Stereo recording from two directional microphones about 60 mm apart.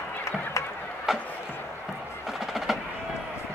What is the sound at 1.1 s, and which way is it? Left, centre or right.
Chop, centre.